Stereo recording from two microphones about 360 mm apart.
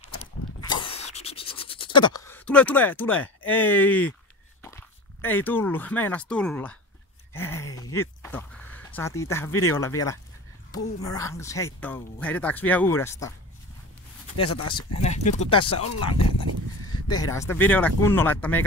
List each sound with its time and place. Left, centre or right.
0.2 s a sound: centre
4.6 s speech: centre
14.4 s speech: left
15.0 s speech: centre